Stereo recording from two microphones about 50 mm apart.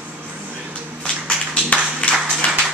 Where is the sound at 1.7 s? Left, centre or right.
Left.